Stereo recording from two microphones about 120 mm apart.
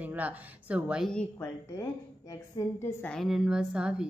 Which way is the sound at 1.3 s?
25° left (ahead or behind).